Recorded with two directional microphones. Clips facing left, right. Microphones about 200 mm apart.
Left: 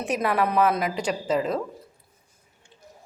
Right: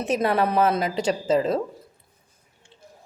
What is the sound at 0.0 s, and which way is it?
Speech, 25° right (ahead or behind).